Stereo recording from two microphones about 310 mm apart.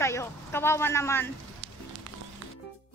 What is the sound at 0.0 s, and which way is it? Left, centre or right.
Speech, centre.